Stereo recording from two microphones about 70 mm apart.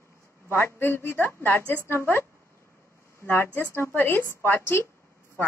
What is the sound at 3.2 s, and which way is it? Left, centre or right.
A woman's voice, left.